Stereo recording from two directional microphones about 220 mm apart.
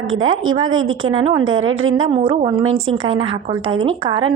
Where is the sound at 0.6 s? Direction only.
65° right (ahead or behind).